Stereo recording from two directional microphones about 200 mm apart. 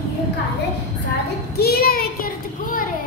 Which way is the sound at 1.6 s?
50° left (ahead or behind).